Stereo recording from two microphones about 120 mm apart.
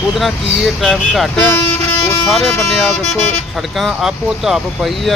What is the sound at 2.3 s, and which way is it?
Speech, centre (ahead or behind).